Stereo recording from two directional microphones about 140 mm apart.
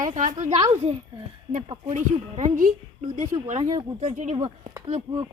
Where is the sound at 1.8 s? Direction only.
60° right (ahead or behind).